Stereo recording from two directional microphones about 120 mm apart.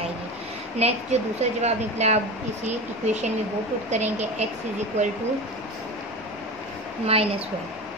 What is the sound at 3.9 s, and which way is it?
Speech, 75° right (ahead or behind).